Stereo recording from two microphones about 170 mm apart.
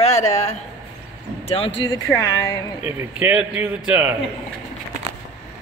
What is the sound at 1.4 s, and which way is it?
Speech, 35° left (ahead or behind).